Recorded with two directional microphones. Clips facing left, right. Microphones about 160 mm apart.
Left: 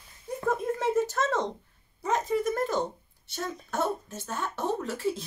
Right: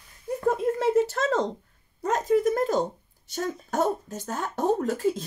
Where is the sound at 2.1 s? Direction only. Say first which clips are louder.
Right 5 dB; 40° right (ahead or behind).